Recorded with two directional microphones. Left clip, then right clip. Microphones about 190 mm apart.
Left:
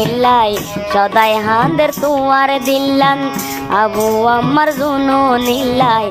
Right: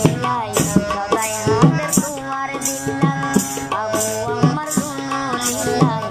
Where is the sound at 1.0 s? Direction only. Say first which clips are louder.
Left 9 dB; 50° left (ahead or behind).